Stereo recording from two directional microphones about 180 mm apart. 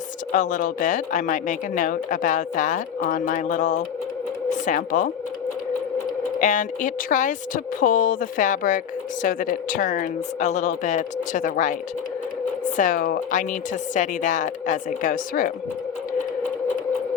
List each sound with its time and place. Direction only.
0.3 s speech: 45° left (ahead or behind)
6.4 s speech: 45° left (ahead or behind)
12.7 s speech: 45° left (ahead or behind)